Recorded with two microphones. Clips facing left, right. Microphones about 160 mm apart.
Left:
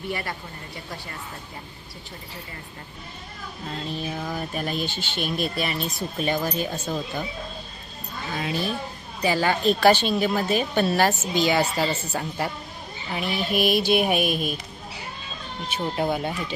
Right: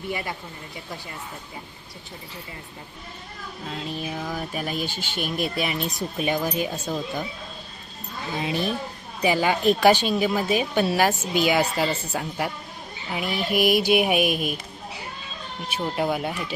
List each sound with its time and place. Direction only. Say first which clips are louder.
3.7 s a sound: even; 5° right (ahead or behind)
4.4 s a woman's voice: left 2 dB; 5° right (ahead or behind)
8.4 s a woman's voice: right 2 dB; 20° right (ahead or behind)
15.7 s a woman's voice: even; 5° right (ahead or behind)